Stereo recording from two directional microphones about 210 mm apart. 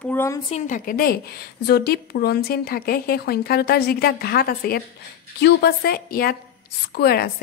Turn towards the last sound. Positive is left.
turn(degrees=50)  # may be behind; listen again after turning